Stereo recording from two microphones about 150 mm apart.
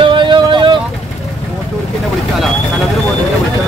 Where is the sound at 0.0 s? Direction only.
35° right (ahead or behind).